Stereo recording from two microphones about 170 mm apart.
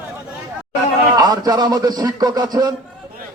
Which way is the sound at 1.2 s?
20° right (ahead or behind).